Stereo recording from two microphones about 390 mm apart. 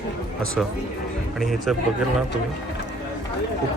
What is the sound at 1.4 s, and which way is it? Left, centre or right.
Speech, centre.